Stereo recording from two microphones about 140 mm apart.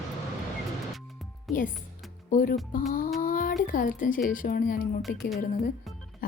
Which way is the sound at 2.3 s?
75° left (ahead or behind).